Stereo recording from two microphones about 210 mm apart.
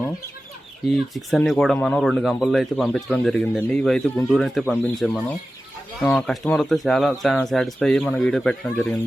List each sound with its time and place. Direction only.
0.9 s speech: centre (ahead or behind)